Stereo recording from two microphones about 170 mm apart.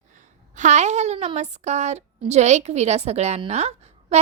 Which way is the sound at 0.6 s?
45° right (ahead or behind).